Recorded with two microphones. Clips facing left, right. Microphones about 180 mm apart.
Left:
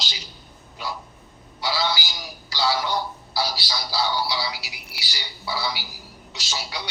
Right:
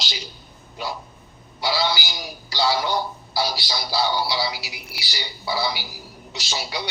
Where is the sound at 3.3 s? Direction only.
20° right (ahead or behind).